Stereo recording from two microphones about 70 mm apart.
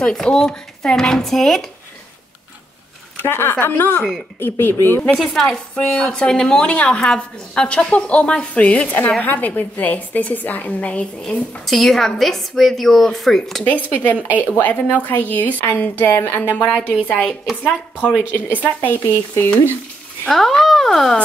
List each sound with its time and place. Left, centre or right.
0.0 s a woman's voice: centre
3.2 s a woman's voice: left
5.1 s a woman's voice: centre
11.6 s a woman's voice: centre
13.7 s a woman's voice: left
18.6 s a woman's voice: left
20.2 s a woman's voice: centre